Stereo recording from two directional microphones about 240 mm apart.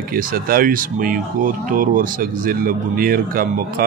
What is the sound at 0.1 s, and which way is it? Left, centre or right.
Speech, right.